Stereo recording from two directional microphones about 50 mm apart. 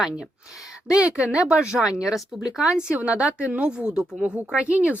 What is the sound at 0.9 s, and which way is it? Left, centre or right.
Speech, right.